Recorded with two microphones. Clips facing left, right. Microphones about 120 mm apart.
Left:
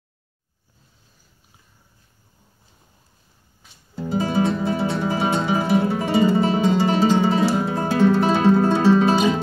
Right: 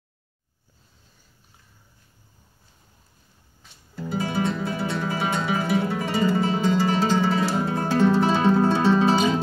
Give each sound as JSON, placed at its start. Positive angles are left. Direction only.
{"t": 3.9, "sound": "guitar", "side_deg": 20}
{"t": 7.1, "sound": "music", "side_deg": 20}